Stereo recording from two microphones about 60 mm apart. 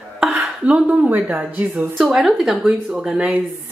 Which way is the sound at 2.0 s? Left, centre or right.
Centre.